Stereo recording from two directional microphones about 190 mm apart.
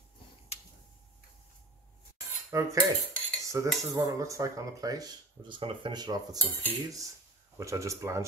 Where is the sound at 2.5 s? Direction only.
15° right (ahead or behind).